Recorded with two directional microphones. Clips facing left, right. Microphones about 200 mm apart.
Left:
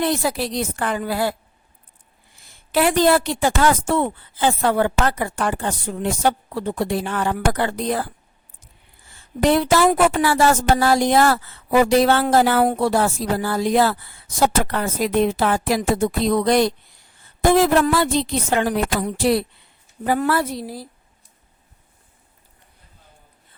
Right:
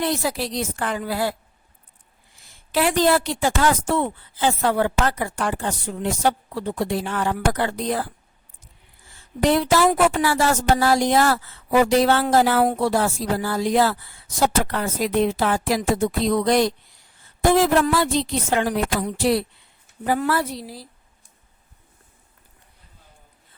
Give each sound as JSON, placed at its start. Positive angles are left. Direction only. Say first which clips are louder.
{"t": 0.0, "sound": "a woman's voice", "louder": "left 2 dB", "side_deg": 55}
{"t": 2.4, "sound": "a woman's voice", "louder": "left 3 dB", "side_deg": 55}
{"t": 9.4, "sound": "a woman's voice", "louder": "left 2 dB", "side_deg": 55}